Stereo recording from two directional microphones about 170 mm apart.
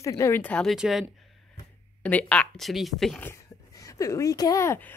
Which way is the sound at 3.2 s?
15° left (ahead or behind).